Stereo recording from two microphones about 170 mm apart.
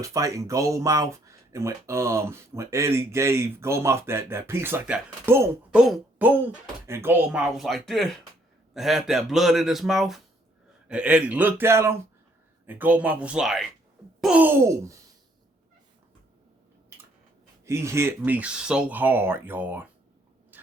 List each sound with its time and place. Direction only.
0.0 s speech: 20° right (ahead or behind)
5.8 s a sound: 10° right (ahead or behind)
6.8 s speech: 15° right (ahead or behind)
17.7 s speech: 15° right (ahead or behind)